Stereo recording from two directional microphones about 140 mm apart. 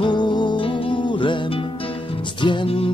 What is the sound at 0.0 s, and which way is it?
Music, 30° left (ahead or behind).